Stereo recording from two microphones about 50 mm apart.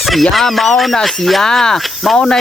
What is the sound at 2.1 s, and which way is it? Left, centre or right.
Speech, centre.